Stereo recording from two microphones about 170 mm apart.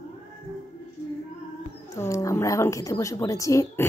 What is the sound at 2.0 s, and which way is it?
A woman's voice, 20° left (ahead or behind).